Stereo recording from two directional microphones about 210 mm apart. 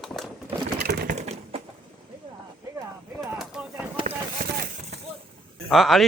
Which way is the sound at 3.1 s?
Centre (ahead or behind).